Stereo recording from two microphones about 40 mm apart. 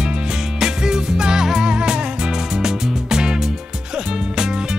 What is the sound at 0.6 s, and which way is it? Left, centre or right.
Music, centre.